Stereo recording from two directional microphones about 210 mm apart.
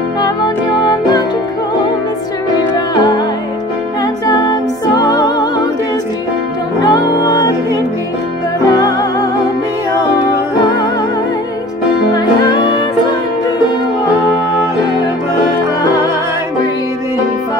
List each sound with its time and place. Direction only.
2.9 s music: 20° left (ahead or behind)
6.8 s music: 20° left (ahead or behind)